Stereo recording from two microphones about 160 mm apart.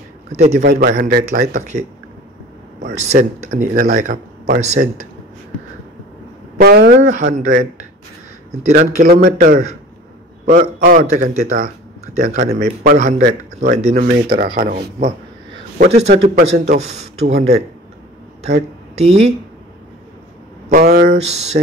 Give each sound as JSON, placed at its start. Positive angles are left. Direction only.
{"t": 0.4, "sound": "speech", "side_deg": -45}
{"t": 0.7, "sound": "speech", "side_deg": -70}
{"t": 1.5, "sound": "speech", "side_deg": -45}
{"t": 2.9, "sound": "speech", "side_deg": -45}
{"t": 6.6, "sound": "speech", "side_deg": -75}
{"t": 7.0, "sound": "speech", "side_deg": -50}
{"t": 9.0, "sound": "speech", "side_deg": -65}
{"t": 10.4, "sound": "a man's voice", "side_deg": -55}
{"t": 13.7, "sound": "speech", "side_deg": -45}
{"t": 14.3, "sound": "a man's voice", "side_deg": -65}
{"t": 15.9, "sound": "speech", "side_deg": -40}
{"t": 18.9, "sound": "speech", "side_deg": -40}
{"t": 20.7, "sound": "speech", "side_deg": -75}
{"t": 21.1, "sound": "speech", "side_deg": -45}